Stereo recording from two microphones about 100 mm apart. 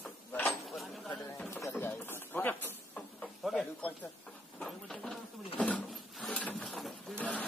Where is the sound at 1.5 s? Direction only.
25° left (ahead or behind).